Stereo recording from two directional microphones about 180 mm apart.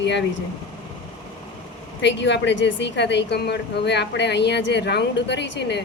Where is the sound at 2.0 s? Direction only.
80° left.